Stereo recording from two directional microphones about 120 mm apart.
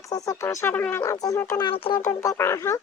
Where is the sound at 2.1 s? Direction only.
20° left (ahead or behind).